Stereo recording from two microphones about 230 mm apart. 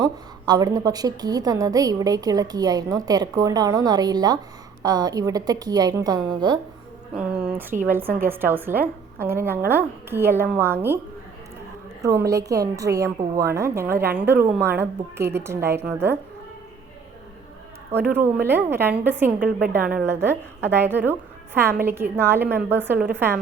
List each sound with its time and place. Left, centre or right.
0.0 s a woman's voice: centre
7.2 s a woman's voice: centre
12.0 s a woman's voice: centre
18.1 s a woman's voice: centre
19.5 s a woman's voice: right
19.7 s a woman's voice: centre